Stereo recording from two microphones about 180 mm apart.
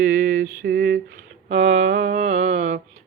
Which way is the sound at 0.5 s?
55° right (ahead or behind).